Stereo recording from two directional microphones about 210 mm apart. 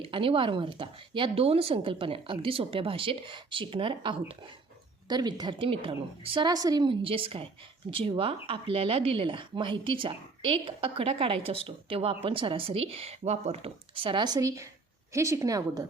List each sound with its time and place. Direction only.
0.1 s a woman's voice: 25° right (ahead or behind)